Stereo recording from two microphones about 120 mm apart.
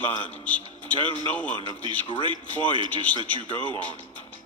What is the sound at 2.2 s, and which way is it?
A man's voice, 45° right (ahead or behind).